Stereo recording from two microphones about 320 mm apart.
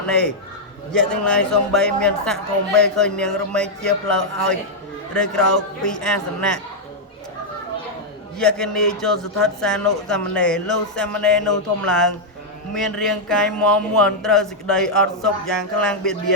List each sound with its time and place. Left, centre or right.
0.0 s speech: centre
8.4 s speech: centre